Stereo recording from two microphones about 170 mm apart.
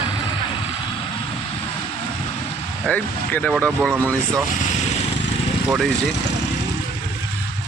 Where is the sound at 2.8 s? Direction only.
5° left (ahead or behind).